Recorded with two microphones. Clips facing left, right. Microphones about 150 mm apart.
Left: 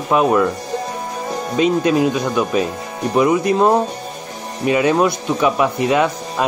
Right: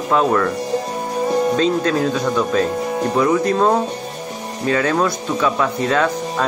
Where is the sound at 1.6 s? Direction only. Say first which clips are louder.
Left 2 dB; 15° left (ahead or behind).